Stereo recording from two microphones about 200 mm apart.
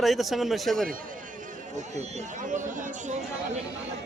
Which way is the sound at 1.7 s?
35° right (ahead or behind).